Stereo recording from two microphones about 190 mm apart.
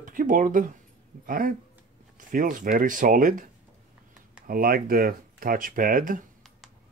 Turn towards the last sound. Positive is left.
turn(degrees=-45)  # may be behind; listen again after turning